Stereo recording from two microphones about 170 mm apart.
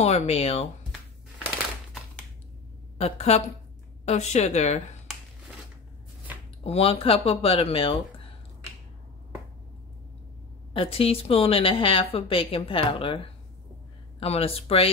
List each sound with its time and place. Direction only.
0.0 s a woman's voice: 40° left (ahead or behind)
3.0 s a woman's voice: 40° left (ahead or behind)
6.6 s a woman's voice: 35° left (ahead or behind)
10.7 s a woman's voice: 35° left (ahead or behind)